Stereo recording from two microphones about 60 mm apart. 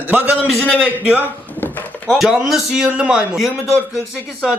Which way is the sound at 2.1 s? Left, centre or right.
Centre.